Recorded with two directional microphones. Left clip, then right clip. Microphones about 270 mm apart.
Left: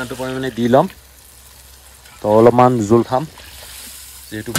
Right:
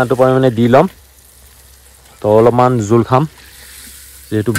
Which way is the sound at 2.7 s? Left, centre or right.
Left.